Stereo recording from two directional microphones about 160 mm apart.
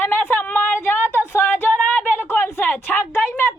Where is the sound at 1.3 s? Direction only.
10° left (ahead or behind).